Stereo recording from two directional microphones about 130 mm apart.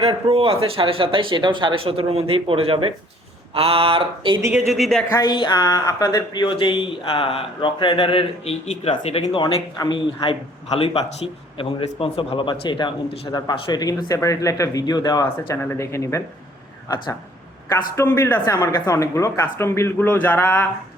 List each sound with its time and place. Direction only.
0.0 s speech: 50° right (ahead or behind)
4.5 s a man's voice: centre (ahead or behind)
5.1 s speech: 35° left (ahead or behind); by 9.4 s 50° left (ahead or behind)
9.4 s speech: 30° left (ahead or behind)
10.7 s a man's voice: 50° left (ahead or behind); by 15.2 s 30° left (ahead or behind)
15.2 s speech: 20° left (ahead or behind)
17.7 s speech: 20° left (ahead or behind)